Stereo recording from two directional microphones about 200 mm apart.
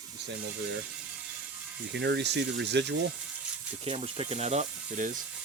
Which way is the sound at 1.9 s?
60° right (ahead or behind).